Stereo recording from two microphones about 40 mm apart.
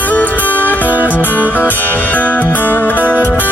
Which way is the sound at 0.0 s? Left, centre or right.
Left.